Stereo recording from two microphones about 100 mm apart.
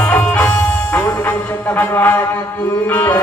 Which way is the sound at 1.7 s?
20° left (ahead or behind).